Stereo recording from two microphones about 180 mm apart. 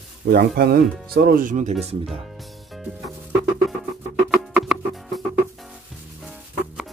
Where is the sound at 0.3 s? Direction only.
60° right (ahead or behind); by 2.0 s 35° right (ahead or behind).